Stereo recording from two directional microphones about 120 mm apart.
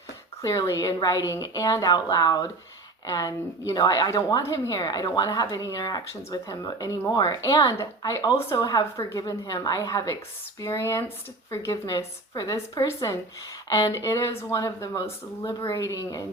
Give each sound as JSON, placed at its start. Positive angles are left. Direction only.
{"t": 0.4, "sound": "a woman's voice", "side_deg": 25}